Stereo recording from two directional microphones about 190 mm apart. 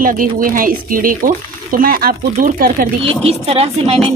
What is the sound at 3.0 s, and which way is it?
Speech, 30° right (ahead or behind).